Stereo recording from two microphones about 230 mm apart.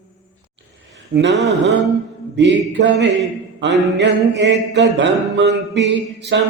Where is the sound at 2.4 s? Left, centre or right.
Right.